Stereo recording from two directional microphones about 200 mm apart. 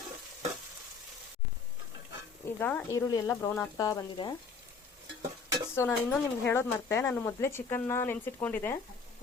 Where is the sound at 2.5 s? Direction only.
10° left (ahead or behind).